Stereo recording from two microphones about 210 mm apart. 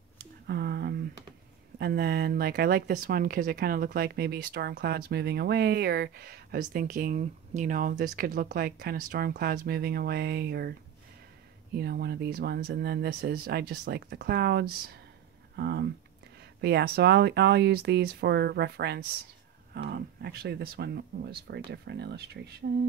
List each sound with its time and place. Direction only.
0.5 s a sound: 50° right (ahead or behind)
1.8 s speech: 45° right (ahead or behind)
11.7 s speech: 50° right (ahead or behind)